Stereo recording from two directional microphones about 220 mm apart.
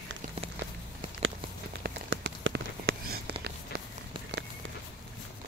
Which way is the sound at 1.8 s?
55° right (ahead or behind).